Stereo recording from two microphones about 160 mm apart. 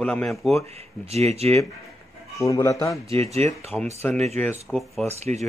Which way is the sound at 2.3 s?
20° left (ahead or behind).